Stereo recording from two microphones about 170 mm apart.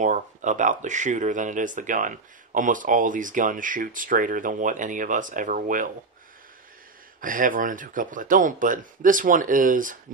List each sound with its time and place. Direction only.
0.0 s speech: 45° right (ahead or behind)
7.2 s speech: 55° right (ahead or behind)